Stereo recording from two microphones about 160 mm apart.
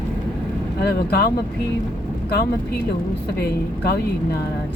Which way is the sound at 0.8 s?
90° left.